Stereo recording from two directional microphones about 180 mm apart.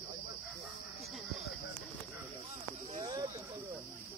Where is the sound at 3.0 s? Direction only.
20° right (ahead or behind).